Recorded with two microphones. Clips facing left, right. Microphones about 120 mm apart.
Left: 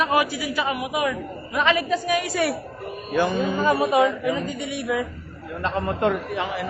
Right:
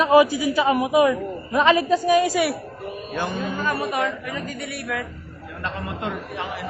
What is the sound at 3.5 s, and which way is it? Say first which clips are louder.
Speech: left 7 dB; 15° left (ahead or behind).